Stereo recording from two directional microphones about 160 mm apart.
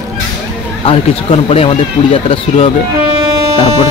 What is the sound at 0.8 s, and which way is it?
Speech, 35° left (ahead or behind).